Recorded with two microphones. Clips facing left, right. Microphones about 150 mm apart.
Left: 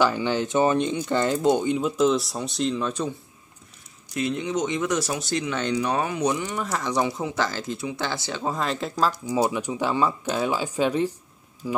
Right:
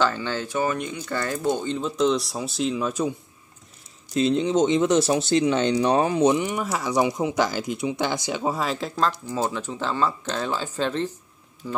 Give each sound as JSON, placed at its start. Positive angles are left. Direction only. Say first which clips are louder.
{"t": 0.0, "sound": "speech", "louder": "left 2 dB", "side_deg": 15}
{"t": 4.1, "sound": "speech", "louder": "right 5 dB", "side_deg": -25}
{"t": 9.2, "sound": "speech", "louder": "left 3 dB", "side_deg": 15}